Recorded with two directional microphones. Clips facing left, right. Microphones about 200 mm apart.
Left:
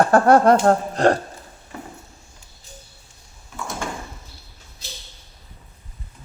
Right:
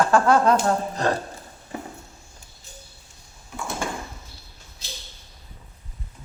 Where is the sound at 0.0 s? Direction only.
60° left (ahead or behind).